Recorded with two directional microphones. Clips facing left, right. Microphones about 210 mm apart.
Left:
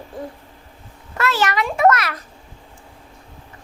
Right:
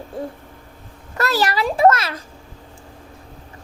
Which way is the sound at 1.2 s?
35° right (ahead or behind).